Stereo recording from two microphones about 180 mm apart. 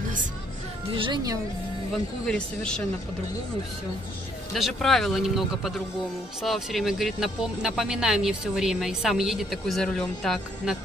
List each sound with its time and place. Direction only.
0.9 s a woman's voice: 25° right (ahead or behind)
2.2 s speech: 5° left (ahead or behind)
4.6 s speech: centre (ahead or behind)